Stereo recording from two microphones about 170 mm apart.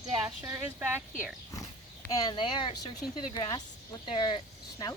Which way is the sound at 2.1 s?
25° left (ahead or behind).